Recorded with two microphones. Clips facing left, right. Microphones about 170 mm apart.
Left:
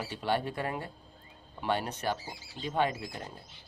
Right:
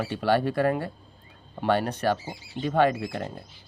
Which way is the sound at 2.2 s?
25° right (ahead or behind).